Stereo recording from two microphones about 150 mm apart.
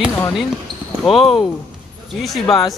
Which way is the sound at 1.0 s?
Centre (ahead or behind).